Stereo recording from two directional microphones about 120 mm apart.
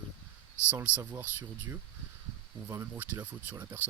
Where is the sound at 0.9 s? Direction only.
15° right (ahead or behind).